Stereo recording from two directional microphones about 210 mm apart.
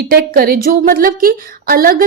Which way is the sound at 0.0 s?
45° right (ahead or behind).